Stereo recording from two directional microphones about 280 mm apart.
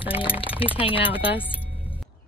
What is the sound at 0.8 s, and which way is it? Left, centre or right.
Speech, centre.